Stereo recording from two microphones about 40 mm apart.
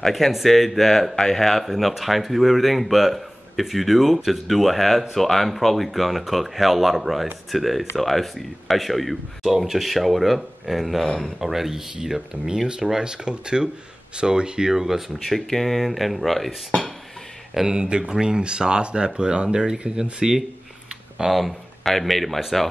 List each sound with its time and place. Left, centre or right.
0.0 s speech: centre; by 14.7 s right
14.7 s speech: centre
15.2 s speech: centre
17.6 s speech: right
21.3 s speech: centre